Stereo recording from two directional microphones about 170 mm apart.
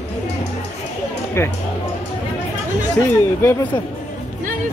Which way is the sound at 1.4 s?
15° left (ahead or behind).